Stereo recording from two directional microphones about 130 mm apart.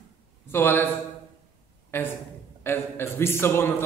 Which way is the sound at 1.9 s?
15° left (ahead or behind).